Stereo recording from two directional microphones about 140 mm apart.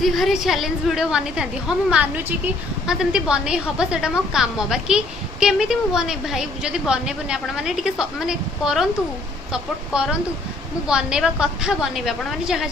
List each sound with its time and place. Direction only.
0.0 s a woman's voice: centre (ahead or behind)